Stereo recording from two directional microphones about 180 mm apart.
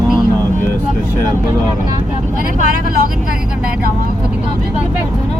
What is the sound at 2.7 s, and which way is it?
Speech, 55° right (ahead or behind).